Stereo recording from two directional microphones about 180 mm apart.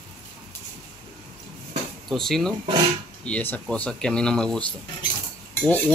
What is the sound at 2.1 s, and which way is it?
Speech, centre (ahead or behind).